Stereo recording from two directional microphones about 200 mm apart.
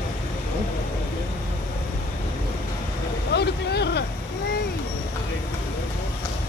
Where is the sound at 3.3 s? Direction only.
55° left (ahead or behind).